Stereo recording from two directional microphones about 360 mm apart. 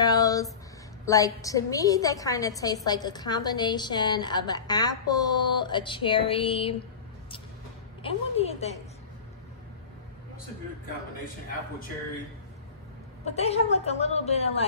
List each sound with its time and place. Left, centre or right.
0.0 s a sound: centre
1.0 s a woman's voice: centre
8.0 s a woman's voice: centre
13.2 s a woman's voice: centre